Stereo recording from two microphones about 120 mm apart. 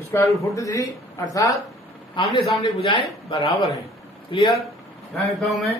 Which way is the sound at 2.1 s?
45° left (ahead or behind).